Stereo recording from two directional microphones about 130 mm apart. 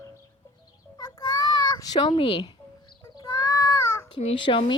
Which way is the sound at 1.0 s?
30° left (ahead or behind).